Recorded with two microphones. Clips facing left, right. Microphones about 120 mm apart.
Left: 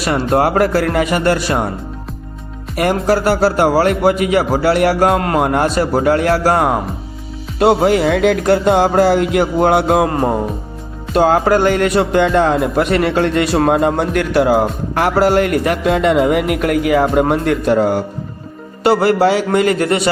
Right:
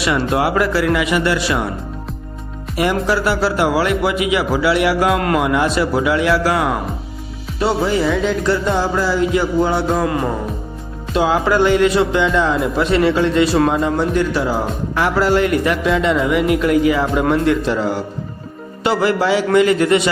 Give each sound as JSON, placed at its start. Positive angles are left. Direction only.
{"t": 0.0, "sound": "speech", "side_deg": 45}
{"t": 2.7, "sound": "speech", "side_deg": 50}
{"t": 7.6, "sound": "speech", "side_deg": 60}
{"t": 10.1, "sound": "music", "side_deg": 40}
{"t": 11.1, "sound": "speech", "side_deg": 50}